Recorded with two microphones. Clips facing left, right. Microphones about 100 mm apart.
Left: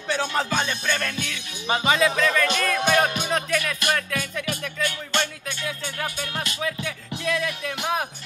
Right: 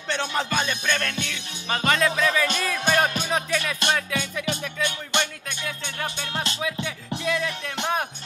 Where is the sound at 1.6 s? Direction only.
20° left (ahead or behind).